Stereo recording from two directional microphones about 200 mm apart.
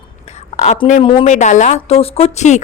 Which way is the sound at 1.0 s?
30° left (ahead or behind).